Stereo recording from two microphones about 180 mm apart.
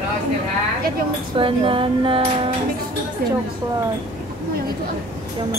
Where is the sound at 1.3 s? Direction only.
30° right (ahead or behind).